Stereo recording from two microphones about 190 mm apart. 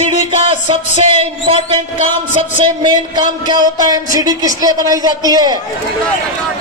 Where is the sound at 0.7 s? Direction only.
30° right (ahead or behind).